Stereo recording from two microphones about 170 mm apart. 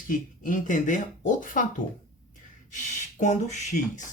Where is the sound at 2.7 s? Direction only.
50° left (ahead or behind).